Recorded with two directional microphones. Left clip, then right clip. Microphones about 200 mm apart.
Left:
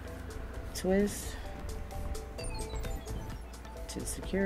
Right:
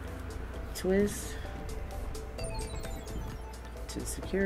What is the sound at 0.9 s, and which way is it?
Speech, 15° left (ahead or behind).